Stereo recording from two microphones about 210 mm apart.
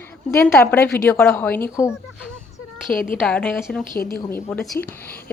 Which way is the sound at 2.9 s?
40° left (ahead or behind).